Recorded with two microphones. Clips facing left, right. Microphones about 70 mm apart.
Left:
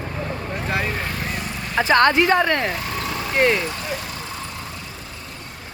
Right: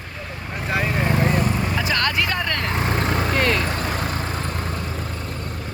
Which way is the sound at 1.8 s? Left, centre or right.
Left.